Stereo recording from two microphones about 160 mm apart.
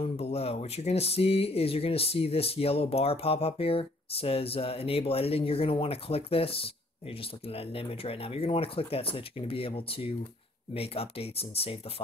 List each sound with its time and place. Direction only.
0.0 s speech: 40° left (ahead or behind)